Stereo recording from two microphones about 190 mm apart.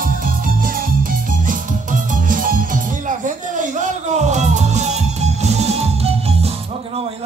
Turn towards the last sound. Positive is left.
turn(degrees=-35)  # may be behind; listen again after turning